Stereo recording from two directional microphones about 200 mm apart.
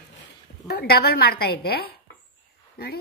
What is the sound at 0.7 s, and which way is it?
A woman's voice, 50° left (ahead or behind).